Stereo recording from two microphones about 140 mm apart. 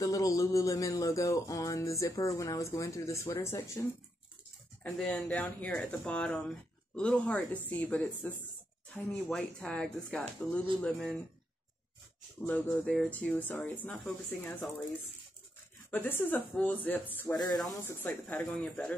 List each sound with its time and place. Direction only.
0.0 s music: 25° left (ahead or behind)
4.8 s speech: 5° left (ahead or behind)
12.4 s speech: 10° left (ahead or behind)
15.9 s speech: 15° left (ahead or behind)